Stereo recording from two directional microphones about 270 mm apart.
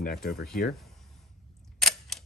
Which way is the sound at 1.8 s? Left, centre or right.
Centre.